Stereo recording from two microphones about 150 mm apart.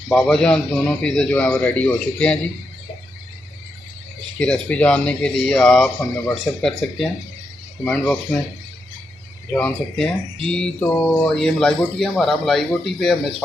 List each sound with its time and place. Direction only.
0.1 s a man's voice: 5° left (ahead or behind)
4.4 s a man's voice: 10° left (ahead or behind)
9.5 s a man's voice: 5° left (ahead or behind)
11.3 s speech: 5° left (ahead or behind)